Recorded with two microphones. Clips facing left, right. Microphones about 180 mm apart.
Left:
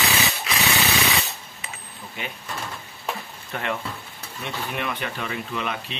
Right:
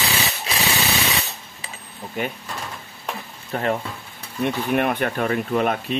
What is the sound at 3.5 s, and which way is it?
Speech, 40° right (ahead or behind).